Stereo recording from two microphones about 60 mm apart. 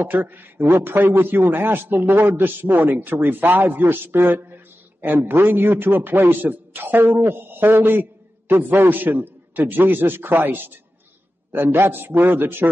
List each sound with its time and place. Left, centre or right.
0.0 s a man's voice: right